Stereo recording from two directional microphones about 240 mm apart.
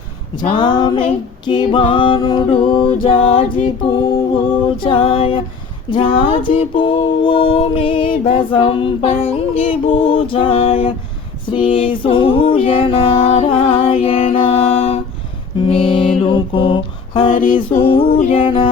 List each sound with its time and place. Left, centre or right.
0.4 s music: centre
4.8 s music: left